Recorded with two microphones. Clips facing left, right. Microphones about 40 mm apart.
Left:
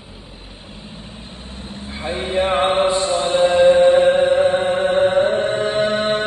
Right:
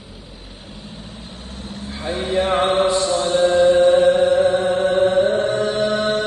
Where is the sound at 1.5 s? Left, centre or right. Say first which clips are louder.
Even; left.